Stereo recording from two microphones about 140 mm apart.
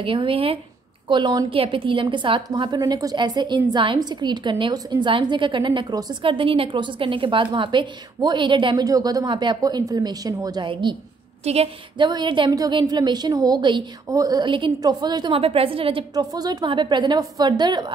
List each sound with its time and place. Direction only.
0.0 s a woman's voice: 40° right (ahead or behind)
11.4 s a woman's voice: 45° right (ahead or behind)
12.0 s a woman's voice: 35° right (ahead or behind)
16.3 s a woman's voice: 25° right (ahead or behind)